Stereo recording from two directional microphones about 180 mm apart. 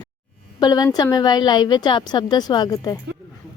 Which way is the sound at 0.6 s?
20° left (ahead or behind).